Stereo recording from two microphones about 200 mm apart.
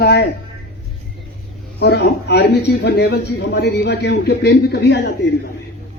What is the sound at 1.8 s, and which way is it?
Speech, 55° left (ahead or behind).